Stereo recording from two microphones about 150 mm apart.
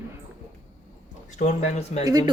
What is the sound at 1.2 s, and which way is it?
Speech, 55° left (ahead or behind).